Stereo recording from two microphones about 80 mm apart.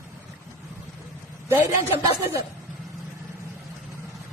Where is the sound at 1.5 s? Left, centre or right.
Right.